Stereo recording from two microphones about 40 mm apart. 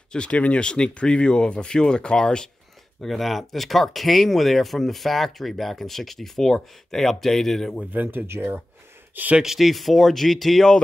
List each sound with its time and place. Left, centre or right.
0.1 s speech: left
3.0 s speech: centre
7.9 s speech: right
9.4 s speech: centre